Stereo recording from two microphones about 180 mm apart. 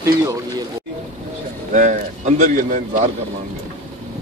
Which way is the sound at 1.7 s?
45° right (ahead or behind).